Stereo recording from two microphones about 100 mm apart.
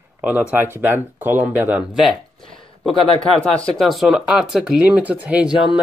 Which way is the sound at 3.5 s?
5° left (ahead or behind).